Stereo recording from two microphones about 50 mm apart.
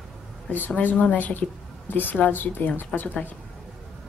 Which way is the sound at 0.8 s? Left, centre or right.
Left.